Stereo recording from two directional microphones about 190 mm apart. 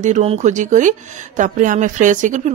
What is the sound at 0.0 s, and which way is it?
Speech, 35° right (ahead or behind).